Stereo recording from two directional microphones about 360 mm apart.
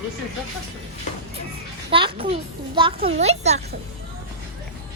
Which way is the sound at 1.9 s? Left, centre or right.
Centre.